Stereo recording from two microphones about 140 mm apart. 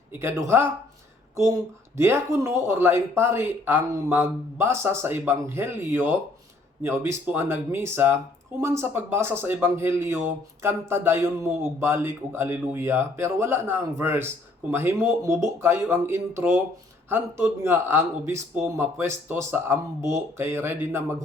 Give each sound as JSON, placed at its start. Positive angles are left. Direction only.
{"t": 0.1, "sound": "speech", "side_deg": -15}
{"t": 2.0, "sound": "speech", "side_deg": -20}